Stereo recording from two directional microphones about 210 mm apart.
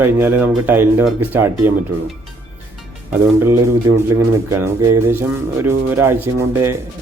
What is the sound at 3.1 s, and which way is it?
Speech, 10° right (ahead or behind).